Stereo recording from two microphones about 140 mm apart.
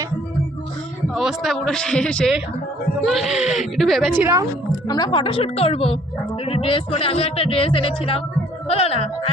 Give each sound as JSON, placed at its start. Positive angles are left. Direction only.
{"t": 1.1, "sound": "a man's voice", "side_deg": -5}
{"t": 4.2, "sound": "a woman's voice", "side_deg": -20}
{"t": 4.9, "sound": "speech", "side_deg": 30}